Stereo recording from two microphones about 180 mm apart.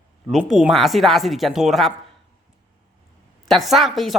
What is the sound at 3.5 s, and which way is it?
Speech, centre (ahead or behind).